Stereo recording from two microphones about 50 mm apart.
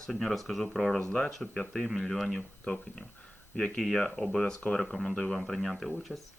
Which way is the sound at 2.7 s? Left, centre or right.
Left.